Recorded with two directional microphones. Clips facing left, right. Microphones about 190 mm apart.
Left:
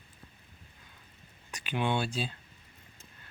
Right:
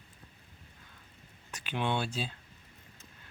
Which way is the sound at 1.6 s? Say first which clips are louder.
Left 2 dB; 5° left (ahead or behind).